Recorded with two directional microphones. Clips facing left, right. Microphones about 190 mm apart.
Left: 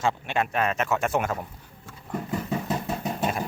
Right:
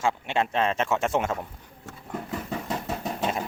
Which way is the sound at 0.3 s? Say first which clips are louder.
Right 1 dB; 25° right (ahead or behind).